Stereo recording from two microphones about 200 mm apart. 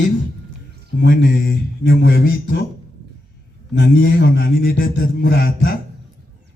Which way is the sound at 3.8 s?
55° left (ahead or behind).